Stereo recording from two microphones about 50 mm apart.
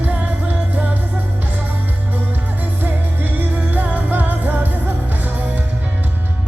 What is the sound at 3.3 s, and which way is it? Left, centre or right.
Music, right.